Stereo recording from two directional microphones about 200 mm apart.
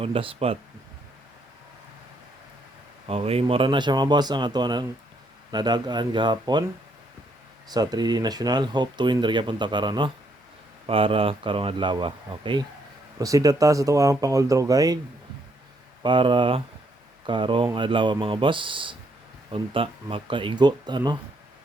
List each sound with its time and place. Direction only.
0.0 s speech: 25° right (ahead or behind)
3.1 s speech: 30° right (ahead or behind)
7.7 s speech: 20° right (ahead or behind)
16.0 s speech: 25° right (ahead or behind)